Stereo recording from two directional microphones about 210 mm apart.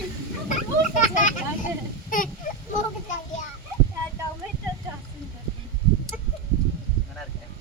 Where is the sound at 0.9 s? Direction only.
35° left (ahead or behind).